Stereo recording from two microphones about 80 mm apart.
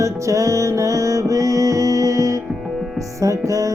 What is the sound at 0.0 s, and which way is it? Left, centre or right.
Music, right.